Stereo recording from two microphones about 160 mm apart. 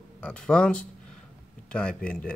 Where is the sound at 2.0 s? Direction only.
5° left (ahead or behind).